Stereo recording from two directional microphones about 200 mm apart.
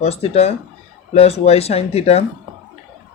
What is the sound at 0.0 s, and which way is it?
Speech, 30° left (ahead or behind).